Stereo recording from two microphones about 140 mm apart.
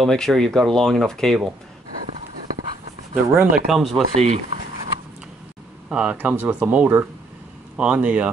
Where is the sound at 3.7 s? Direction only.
Centre (ahead or behind).